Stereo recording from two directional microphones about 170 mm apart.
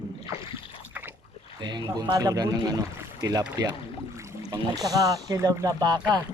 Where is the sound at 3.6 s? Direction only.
20° right (ahead or behind).